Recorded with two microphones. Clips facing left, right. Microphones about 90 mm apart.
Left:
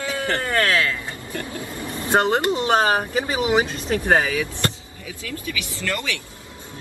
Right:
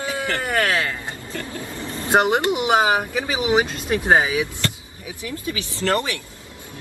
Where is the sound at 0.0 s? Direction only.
20° right (ahead or behind).